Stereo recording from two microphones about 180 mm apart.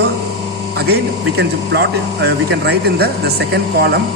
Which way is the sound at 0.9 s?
65° right (ahead or behind).